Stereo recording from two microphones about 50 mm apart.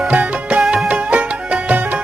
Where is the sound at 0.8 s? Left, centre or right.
Right.